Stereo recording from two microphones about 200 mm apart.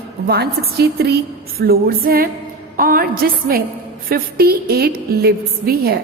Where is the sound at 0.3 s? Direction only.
55° right (ahead or behind).